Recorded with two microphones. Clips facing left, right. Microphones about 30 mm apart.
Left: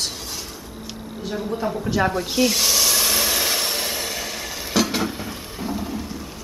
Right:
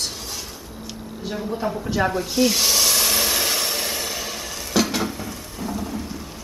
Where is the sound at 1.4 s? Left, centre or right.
Centre.